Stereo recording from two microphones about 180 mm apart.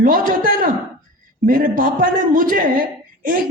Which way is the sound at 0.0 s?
50° right (ahead or behind).